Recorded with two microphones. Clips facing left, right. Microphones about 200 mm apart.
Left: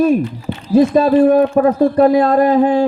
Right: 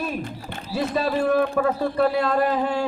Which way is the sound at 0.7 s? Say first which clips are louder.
Left 13 dB; 50° left (ahead or behind).